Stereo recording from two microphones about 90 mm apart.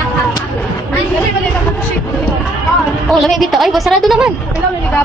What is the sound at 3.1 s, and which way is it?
A woman's voice, 5° left (ahead or behind).